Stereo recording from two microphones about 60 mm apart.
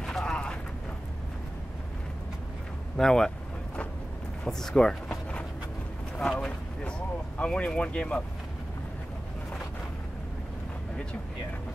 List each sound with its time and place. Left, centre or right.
0.0 s vehicle: centre
3.0 s speech: centre
4.5 s speech: centre
6.1 s speech: centre
7.3 s speech: centre